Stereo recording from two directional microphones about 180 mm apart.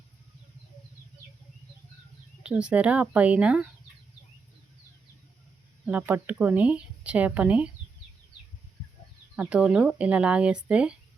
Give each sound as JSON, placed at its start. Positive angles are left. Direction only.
{"t": 2.4, "sound": "speech", "side_deg": -5}
{"t": 5.8, "sound": "speech", "side_deg": -5}
{"t": 9.3, "sound": "speech", "side_deg": -5}